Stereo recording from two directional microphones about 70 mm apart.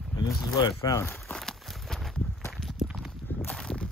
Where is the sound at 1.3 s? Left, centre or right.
Centre.